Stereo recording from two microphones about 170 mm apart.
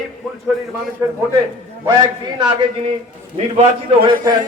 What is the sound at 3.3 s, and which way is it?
Speech, 40° right (ahead or behind).